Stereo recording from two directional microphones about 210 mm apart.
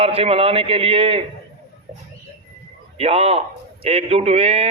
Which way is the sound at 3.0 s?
30° right (ahead or behind).